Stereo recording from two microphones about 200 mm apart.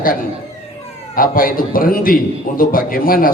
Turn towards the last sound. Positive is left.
turn(degrees=45)  # may be behind; listen again after turning